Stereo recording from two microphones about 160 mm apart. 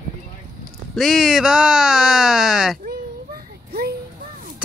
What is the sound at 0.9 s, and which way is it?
Speech, centre (ahead or behind).